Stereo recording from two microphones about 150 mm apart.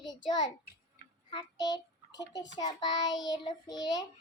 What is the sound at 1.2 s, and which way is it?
Child singing, 30° left (ahead or behind).